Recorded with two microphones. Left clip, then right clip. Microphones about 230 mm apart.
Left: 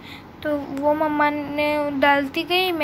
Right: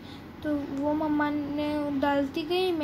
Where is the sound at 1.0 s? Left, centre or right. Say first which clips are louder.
Left 8 dB; centre.